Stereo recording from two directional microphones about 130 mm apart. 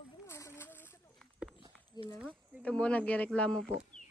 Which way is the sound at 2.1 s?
10° right (ahead or behind).